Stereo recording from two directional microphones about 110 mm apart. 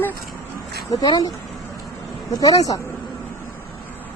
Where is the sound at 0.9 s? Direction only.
35° left (ahead or behind).